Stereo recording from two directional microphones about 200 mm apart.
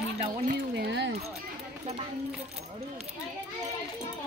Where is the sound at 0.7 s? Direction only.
60° right (ahead or behind).